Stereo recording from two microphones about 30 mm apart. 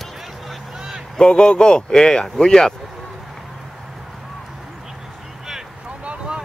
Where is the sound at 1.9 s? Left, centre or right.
Centre.